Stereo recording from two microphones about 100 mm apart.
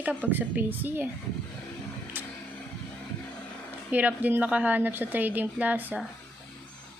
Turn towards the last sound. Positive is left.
turn(degrees=-15)  # may be behind; listen again after turning